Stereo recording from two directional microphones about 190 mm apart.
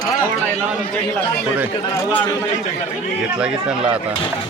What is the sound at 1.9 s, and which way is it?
Speech, 10° left (ahead or behind).